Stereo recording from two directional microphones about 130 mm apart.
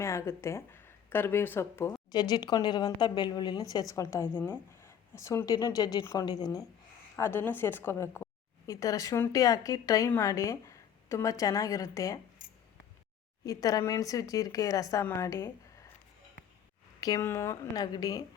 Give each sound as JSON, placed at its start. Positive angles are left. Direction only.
{"t": 0.0, "sound": "speech", "side_deg": 25}
{"t": 2.1, "sound": "a woman's voice", "side_deg": 30}
{"t": 7.2, "sound": "a woman's voice", "side_deg": 15}
{"t": 13.4, "sound": "a woman's voice", "side_deg": 30}
{"t": 17.0, "sound": "a woman's voice", "side_deg": 25}